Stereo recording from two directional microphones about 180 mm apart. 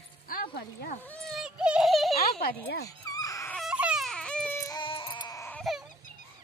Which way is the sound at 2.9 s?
20° left (ahead or behind).